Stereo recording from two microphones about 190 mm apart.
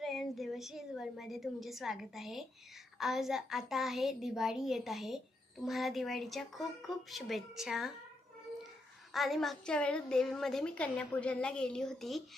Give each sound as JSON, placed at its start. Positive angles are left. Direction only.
{"t": 0.0, "sound": "a woman's voice", "side_deg": 0}
{"t": 9.1, "sound": "a woman's voice", "side_deg": 0}